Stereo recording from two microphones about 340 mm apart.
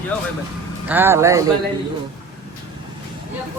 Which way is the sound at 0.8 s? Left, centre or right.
Centre.